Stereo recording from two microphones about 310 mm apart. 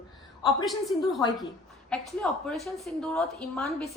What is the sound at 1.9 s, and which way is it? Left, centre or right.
A woman's voice, centre.